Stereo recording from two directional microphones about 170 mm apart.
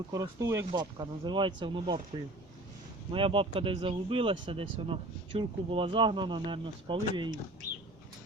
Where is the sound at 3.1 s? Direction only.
30° right (ahead or behind).